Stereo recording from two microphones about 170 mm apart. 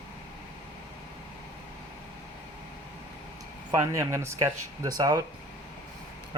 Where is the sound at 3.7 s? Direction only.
15° right (ahead or behind).